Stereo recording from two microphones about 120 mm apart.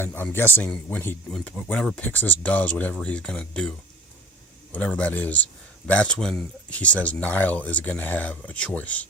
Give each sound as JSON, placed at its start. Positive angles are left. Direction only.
{"t": 0.0, "sound": "speech", "side_deg": 15}